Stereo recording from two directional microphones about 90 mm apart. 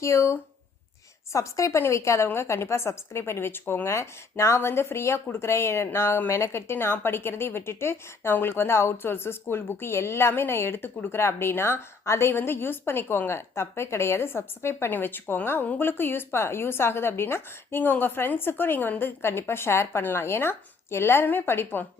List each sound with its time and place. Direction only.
0.0 s a woman's voice: 30° left (ahead or behind)